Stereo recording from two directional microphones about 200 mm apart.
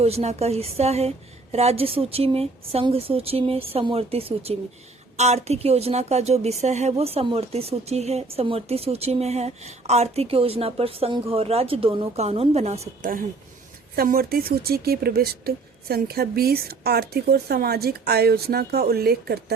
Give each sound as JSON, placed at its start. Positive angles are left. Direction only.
{"t": 0.0, "sound": "a woman's voice", "side_deg": -30}
{"t": 13.9, "sound": "speech", "side_deg": -50}